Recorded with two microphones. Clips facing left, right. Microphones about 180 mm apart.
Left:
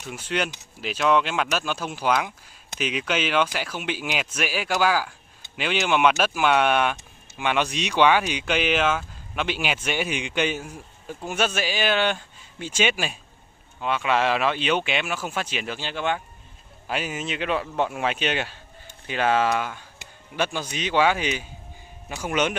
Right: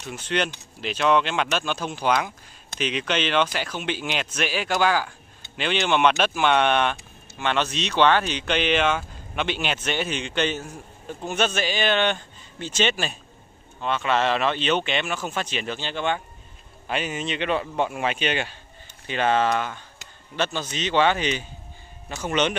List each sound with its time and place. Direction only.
0.0 s speech: 5° left (ahead or behind)